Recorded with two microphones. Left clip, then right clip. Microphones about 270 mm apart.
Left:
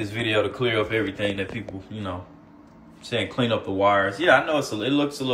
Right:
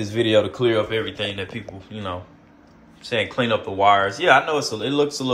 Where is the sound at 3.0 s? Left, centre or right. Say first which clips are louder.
Right 3 dB; centre.